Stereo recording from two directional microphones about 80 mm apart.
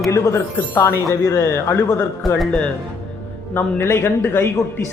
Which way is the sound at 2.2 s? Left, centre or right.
Centre.